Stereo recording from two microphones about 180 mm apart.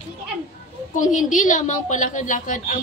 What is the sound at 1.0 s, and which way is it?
A woman's voice, 45° left (ahead or behind).